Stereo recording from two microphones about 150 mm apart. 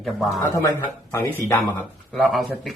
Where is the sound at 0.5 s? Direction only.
15° left (ahead or behind).